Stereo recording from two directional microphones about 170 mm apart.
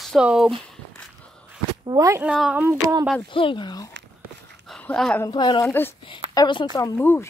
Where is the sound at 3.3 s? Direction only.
30° left (ahead or behind).